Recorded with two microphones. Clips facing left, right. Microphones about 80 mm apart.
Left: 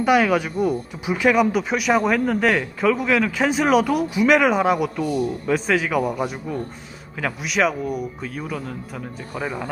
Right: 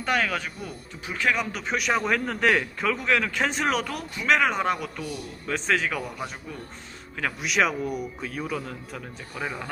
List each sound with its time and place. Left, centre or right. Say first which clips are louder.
0.0 s speech: left 9 dB; centre
7.2 s speech: left 3 dB; centre